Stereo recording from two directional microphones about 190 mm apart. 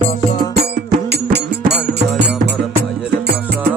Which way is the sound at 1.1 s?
60° right (ahead or behind).